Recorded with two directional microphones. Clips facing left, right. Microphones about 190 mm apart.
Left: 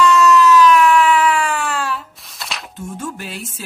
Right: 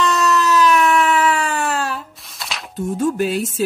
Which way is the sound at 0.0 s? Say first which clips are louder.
Left 5 dB; 35° right (ahead or behind).